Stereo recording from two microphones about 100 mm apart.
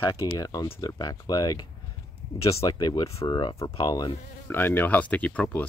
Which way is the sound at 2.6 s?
45° left (ahead or behind).